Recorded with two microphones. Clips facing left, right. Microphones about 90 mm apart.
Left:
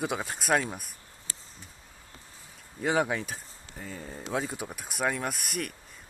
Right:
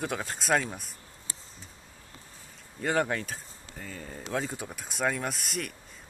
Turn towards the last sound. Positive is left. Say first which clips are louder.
# left 1 dB
turn(degrees=0)  # may be behind; listen again after turning